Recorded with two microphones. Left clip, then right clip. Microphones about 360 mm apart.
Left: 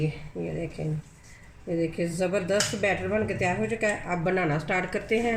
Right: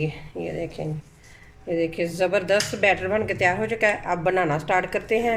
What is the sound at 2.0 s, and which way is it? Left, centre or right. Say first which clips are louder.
Speech: right 5 dB; right.